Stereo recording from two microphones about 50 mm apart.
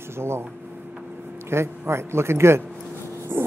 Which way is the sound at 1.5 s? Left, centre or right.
Right.